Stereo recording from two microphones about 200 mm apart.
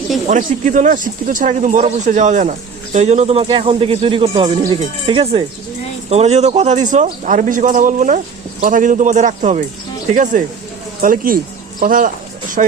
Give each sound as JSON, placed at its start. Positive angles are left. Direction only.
{"t": 0.3, "sound": "speech", "side_deg": -40}
{"t": 4.6, "sound": "wind chime", "side_deg": -25}
{"t": 6.1, "sound": "speech", "side_deg": -35}
{"t": 11.8, "sound": "a sound", "side_deg": -45}